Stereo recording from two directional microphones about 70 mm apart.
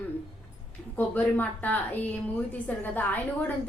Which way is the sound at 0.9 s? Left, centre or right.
Left.